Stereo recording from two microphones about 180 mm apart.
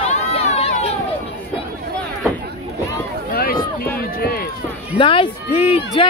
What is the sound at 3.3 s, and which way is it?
Run, 55° left (ahead or behind).